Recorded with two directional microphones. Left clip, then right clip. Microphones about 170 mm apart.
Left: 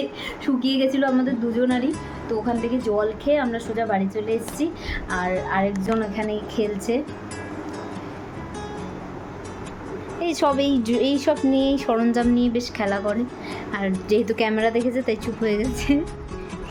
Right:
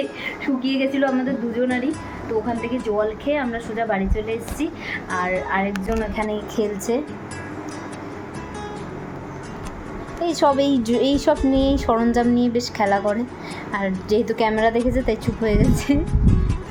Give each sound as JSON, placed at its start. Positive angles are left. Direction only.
{"t": 0.3, "sound": "a woman's voice", "side_deg": 20}
{"t": 6.1, "sound": "a woman's voice", "side_deg": 0}
{"t": 10.2, "sound": "a woman's voice", "side_deg": 5}